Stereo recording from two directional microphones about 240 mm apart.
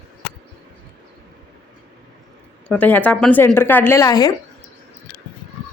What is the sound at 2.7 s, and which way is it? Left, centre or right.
A woman's voice, centre.